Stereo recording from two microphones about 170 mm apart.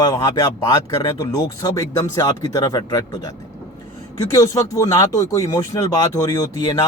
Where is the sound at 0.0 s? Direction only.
25° left (ahead or behind).